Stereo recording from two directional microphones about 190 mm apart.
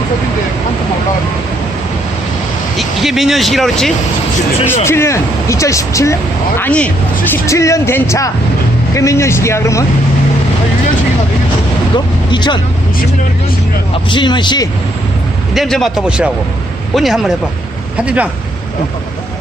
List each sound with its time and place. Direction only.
2.7 s speech: centre (ahead or behind)
4.7 s speech: 15° left (ahead or behind)
11.9 s speech: 25° left (ahead or behind)
14.1 s speech: 25° left (ahead or behind)
15.5 s speech: centre (ahead or behind)